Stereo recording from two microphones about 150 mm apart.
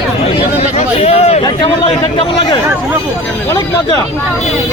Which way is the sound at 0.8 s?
45° left (ahead or behind).